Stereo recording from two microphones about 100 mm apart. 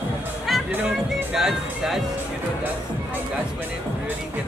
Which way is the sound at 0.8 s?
5° right (ahead or behind).